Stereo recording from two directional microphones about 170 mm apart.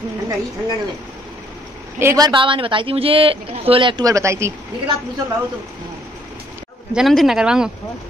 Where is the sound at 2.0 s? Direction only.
20° right (ahead or behind).